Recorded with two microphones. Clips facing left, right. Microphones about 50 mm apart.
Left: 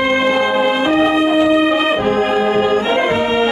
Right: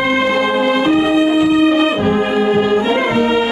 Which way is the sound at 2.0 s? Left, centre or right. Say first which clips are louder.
Even; centre.